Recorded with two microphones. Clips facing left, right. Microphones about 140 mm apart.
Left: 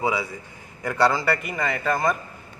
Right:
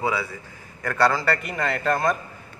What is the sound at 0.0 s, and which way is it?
A man's voice, 15° left (ahead or behind).